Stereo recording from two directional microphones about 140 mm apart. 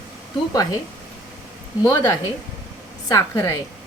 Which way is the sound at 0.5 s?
25° left (ahead or behind).